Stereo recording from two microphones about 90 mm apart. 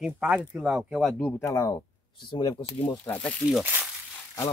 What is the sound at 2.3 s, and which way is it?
Speech, 50° left (ahead or behind).